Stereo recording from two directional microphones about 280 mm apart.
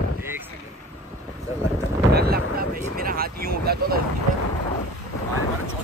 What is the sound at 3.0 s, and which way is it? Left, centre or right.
Speech, right.